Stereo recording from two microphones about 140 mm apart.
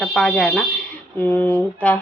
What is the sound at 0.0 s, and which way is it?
A woman's voice, 5° left (ahead or behind).